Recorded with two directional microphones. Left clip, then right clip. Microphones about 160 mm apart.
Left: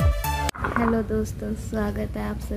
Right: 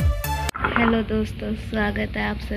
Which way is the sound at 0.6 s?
45° right (ahead or behind).